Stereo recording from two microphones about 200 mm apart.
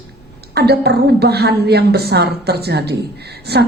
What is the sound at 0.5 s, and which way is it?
A woman's voice, 55° right (ahead or behind).